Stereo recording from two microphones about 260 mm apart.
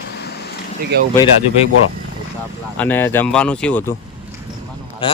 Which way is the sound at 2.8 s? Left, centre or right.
Centre.